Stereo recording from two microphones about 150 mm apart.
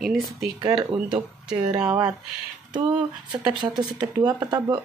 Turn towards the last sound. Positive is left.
turn(degrees=-25)  # may be behind; listen again after turning